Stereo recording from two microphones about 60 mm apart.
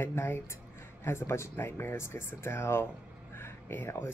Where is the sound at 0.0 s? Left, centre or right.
Left.